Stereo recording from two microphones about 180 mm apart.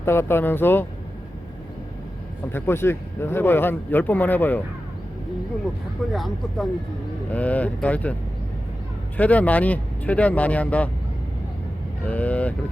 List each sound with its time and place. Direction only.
0.0 s speech: 15° left (ahead or behind)
2.5 s speech: 15° left (ahead or behind)
6.1 s speech: centre (ahead or behind)
9.1 s speech: 10° left (ahead or behind)
12.0 s speech: 10° left (ahead or behind)